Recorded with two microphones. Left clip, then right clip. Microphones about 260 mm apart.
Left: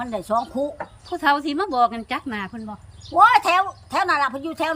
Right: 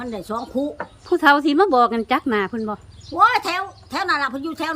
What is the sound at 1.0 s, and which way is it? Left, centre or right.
Speech, centre.